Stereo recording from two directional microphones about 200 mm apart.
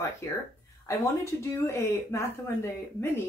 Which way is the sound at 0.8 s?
15° left (ahead or behind).